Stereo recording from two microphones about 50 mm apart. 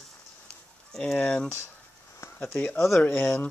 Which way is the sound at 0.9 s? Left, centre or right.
Centre.